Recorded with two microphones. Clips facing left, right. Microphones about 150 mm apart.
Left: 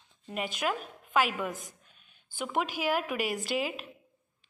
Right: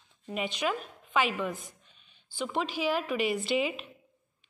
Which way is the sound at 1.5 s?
45° left (ahead or behind).